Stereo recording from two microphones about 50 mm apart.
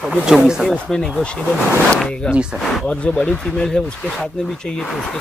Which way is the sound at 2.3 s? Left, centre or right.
Centre.